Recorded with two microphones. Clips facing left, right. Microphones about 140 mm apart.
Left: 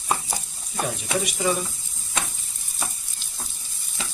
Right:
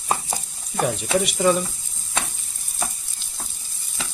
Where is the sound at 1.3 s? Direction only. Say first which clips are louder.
Right 6 dB; 65° right (ahead or behind).